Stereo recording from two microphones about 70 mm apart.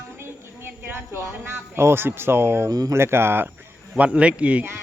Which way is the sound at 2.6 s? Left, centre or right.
Right.